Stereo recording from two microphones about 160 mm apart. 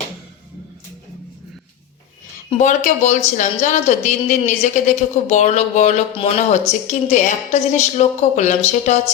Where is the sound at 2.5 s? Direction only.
50° left (ahead or behind).